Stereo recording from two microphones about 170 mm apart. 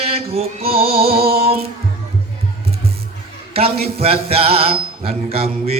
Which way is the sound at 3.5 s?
35° right (ahead or behind).